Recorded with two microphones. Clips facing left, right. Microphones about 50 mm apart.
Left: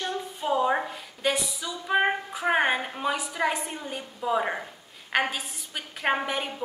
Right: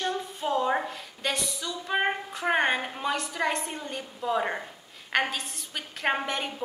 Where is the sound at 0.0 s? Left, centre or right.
Centre.